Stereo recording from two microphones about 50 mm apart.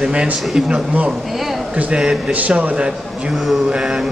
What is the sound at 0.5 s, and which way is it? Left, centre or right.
Speech, centre.